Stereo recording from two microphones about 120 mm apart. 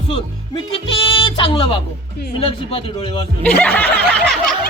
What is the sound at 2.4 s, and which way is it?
Speech, 50° left (ahead or behind).